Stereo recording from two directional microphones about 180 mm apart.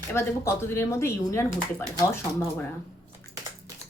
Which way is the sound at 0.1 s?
15° left (ahead or behind).